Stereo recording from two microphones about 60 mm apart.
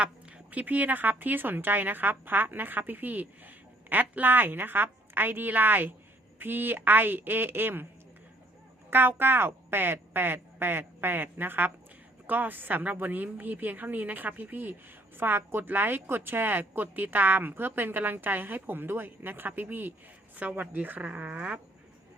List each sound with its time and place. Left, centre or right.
0.0 s a sound: centre
0.6 s a woman's voice: right
8.9 s a woman's voice: right